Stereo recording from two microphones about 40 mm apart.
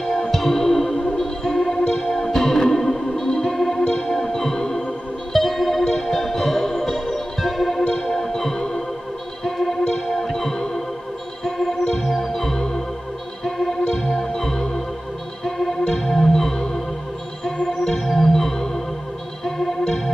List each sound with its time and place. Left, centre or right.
0.3 s music: centre
3.5 s organ: centre
5.3 s music: centre
11.7 s organ: centre
13.4 s music: centre
13.7 s music: centre
14.2 s organ: centre
15.4 s music: centre
17.7 s music: centre
19.4 s organ: centre